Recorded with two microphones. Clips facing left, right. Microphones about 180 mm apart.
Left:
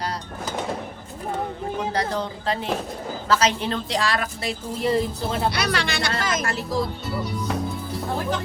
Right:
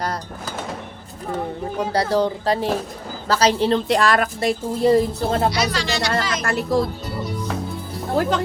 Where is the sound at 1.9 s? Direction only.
35° right (ahead or behind).